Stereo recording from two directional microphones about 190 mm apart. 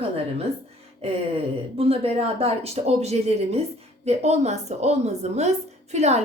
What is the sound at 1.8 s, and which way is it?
A woman's voice, 30° right (ahead or behind).